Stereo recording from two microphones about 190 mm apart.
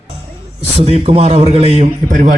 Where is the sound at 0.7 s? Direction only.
35° right (ahead or behind).